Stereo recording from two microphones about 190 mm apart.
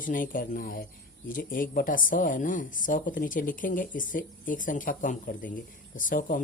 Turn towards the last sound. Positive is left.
turn(degrees=45)  # may be behind; listen again after turning